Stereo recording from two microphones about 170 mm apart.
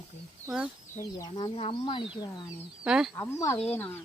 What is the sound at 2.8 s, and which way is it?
Speech, 5° right (ahead or behind).